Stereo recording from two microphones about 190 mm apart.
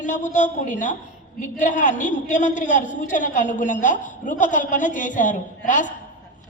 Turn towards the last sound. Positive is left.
turn(degrees=40)  # may be behind; listen again after turning